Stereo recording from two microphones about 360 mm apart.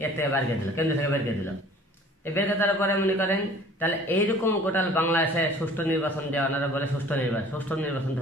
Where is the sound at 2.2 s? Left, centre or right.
Centre.